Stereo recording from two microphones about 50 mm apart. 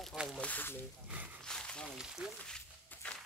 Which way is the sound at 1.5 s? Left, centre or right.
Centre.